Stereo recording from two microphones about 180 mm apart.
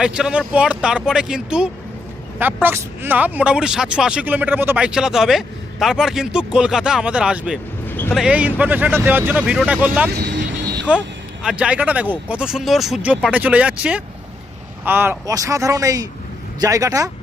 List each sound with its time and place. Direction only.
0.0 s speech: 5° right (ahead or behind)
7.9 s a sound: 10° left (ahead or behind)
8.1 s speech: 5° right (ahead or behind)
10.1 s vehicle: 70° right (ahead or behind)
11.4 s speech: 5° right (ahead or behind)